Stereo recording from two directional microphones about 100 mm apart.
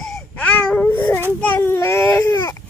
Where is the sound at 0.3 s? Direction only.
15° left (ahead or behind).